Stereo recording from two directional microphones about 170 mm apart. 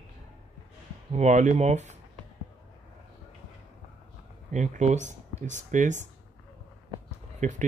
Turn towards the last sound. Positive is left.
turn(degrees=-45)  # may be behind; listen again after turning